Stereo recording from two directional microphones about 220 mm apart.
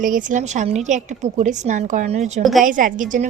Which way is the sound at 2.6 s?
35° right (ahead or behind).